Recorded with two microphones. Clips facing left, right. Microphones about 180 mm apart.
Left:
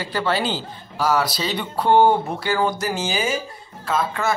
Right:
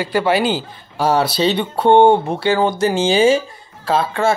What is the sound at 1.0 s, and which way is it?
Speech, 30° right (ahead or behind).